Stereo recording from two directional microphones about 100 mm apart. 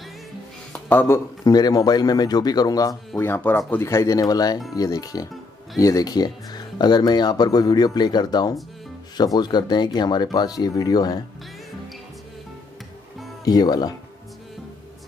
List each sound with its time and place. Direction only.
0.7 s speech: 20° left (ahead or behind)
1.5 s a man's voice: 40° left (ahead or behind)
3.2 s a man's voice: 20° left (ahead or behind); by 11.1 s 40° left (ahead or behind)
13.5 s a man's voice: 40° left (ahead or behind)